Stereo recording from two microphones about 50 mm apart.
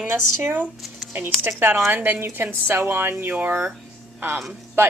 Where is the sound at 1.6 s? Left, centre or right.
Right.